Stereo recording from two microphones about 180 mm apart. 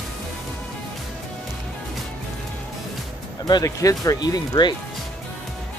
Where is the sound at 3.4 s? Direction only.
20° left (ahead or behind).